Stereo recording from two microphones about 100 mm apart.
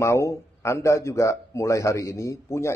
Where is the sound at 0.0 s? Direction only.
30° left (ahead or behind).